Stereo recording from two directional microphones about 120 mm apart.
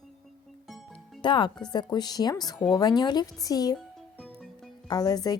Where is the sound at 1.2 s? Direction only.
40° left (ahead or behind).